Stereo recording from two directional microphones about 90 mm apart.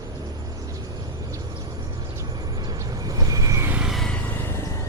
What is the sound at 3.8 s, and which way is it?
Vehicle, centre (ahead or behind).